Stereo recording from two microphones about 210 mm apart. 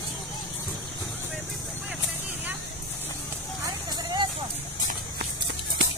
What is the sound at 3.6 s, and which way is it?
Vehicle, 20° right (ahead or behind).